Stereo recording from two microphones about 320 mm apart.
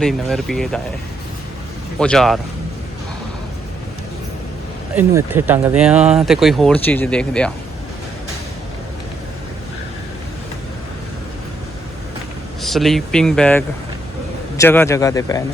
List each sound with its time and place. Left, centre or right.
0.0 s speech: centre
2.0 s speech: centre
4.9 s speech: centre
12.6 s a man's voice: centre